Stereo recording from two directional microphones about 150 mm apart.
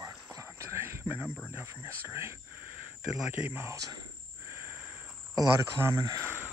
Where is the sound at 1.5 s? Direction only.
15° right (ahead or behind).